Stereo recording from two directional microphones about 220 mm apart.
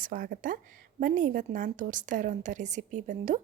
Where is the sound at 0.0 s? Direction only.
40° right (ahead or behind).